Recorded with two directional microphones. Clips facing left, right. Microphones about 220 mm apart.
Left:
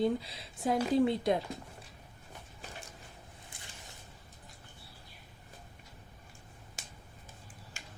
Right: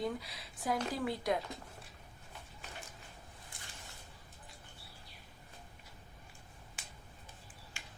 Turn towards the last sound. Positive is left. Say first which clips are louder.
# left 2 dB
turn(degrees=40)  # may be behind; listen again after turning